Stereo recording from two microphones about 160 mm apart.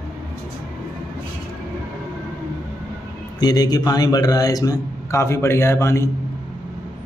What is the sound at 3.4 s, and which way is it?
A man's voice, 25° left (ahead or behind).